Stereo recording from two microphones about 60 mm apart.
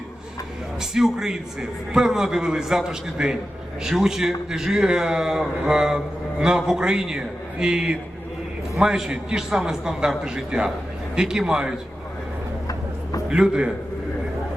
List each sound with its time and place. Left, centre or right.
0.8 s a man's voice: centre
12.6 s a sound: left
13.3 s a man's voice: centre